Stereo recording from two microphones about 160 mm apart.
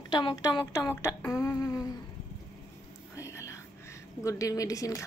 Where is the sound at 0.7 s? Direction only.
15° left (ahead or behind).